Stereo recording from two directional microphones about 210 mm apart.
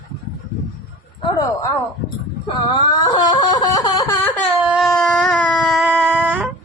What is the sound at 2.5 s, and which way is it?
Wail, 25° left (ahead or behind).